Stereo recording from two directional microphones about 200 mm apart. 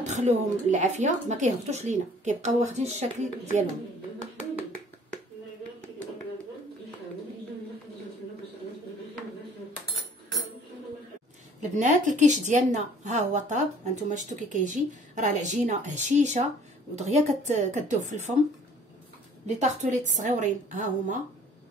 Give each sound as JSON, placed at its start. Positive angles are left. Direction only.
{"t": 0.0, "sound": "a woman's voice", "side_deg": -35}
{"t": 11.7, "sound": "a woman's voice", "side_deg": -40}
{"t": 19.4, "sound": "a woman's voice", "side_deg": -35}